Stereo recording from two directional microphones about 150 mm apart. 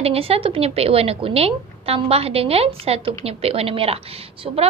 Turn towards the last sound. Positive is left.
turn(degrees=-40)  # may be behind; listen again after turning